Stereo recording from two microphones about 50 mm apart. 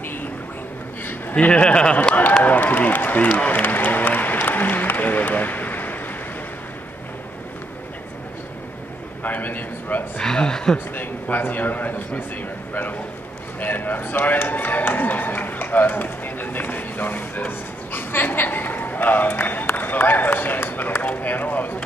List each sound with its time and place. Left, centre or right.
1.5 s speech: left
2.4 s speech: left
3.3 s applause: left
9.2 s a man's voice: left
10.2 s speech: centre
11.0 s a man's voice: left
13.6 s a man's voice: left